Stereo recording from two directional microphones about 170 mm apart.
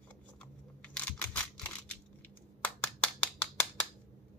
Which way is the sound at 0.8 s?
10° left (ahead or behind).